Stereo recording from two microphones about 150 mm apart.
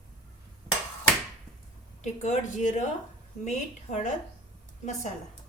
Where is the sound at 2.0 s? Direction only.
55° left (ahead or behind).